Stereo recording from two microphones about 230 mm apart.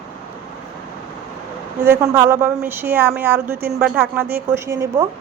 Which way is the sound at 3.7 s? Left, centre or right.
Centre.